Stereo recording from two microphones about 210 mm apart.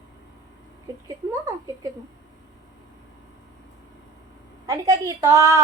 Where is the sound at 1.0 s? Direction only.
15° right (ahead or behind).